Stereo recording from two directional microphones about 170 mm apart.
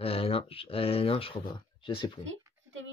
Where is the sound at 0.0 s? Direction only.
35° left (ahead or behind).